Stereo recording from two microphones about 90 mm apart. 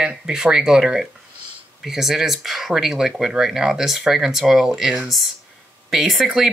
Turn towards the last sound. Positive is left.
turn(degrees=0)  # may be behind; listen again after turning